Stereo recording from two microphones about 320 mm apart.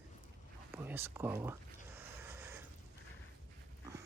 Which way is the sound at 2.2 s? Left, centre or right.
Centre.